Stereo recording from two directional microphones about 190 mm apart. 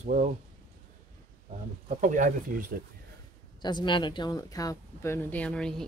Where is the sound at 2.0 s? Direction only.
45° right (ahead or behind).